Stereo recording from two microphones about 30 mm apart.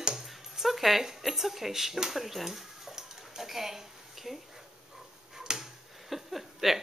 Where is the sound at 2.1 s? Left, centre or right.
Centre.